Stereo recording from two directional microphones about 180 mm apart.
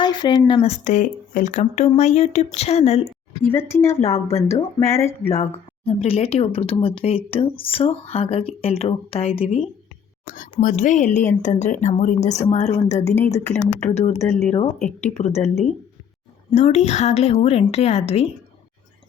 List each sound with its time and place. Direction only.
0.0 s speech: 25° left (ahead or behind)
3.4 s speech: 15° left (ahead or behind)
4.8 s speech: 35° left (ahead or behind)
10.2 s speech: 45° left (ahead or behind)
16.6 s speech: 40° left (ahead or behind)